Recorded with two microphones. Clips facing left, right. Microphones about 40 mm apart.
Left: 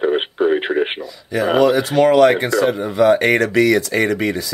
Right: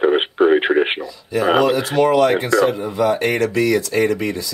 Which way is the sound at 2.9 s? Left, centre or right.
Left.